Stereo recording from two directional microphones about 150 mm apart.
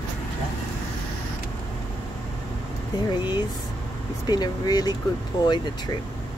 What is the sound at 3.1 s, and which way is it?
Speech, 30° left (ahead or behind).